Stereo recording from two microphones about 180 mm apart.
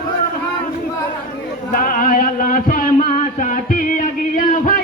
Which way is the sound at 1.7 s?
50° left (ahead or behind).